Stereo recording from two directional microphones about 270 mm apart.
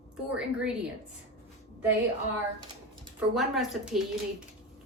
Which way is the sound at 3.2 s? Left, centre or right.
Centre.